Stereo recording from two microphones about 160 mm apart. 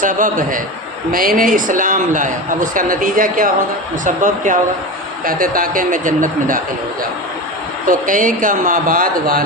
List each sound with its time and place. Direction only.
0.0 s a man's voice: 55° right (ahead or behind)
7.9 s a man's voice: 55° right (ahead or behind)